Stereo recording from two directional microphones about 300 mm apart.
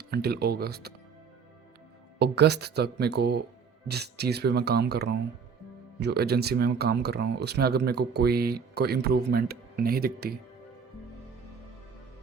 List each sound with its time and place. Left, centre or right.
0.0 s speech: right
2.1 s speech: right